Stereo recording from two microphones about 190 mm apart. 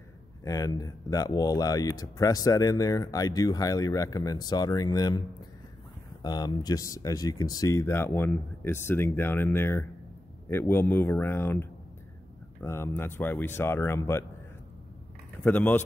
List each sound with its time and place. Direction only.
0.4 s speech: 20° left (ahead or behind)
6.2 s speech: 20° left (ahead or behind)
15.4 s speech: 10° left (ahead or behind)